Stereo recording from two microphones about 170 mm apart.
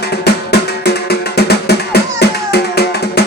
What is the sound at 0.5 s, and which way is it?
Music, 70° left (ahead or behind).